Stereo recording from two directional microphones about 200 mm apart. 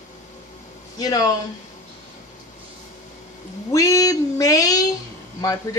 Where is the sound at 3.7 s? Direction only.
15° left (ahead or behind).